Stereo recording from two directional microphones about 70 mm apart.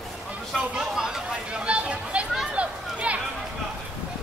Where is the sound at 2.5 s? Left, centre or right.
Centre.